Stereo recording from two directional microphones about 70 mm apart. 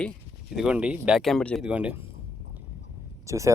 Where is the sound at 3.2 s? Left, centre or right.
Right.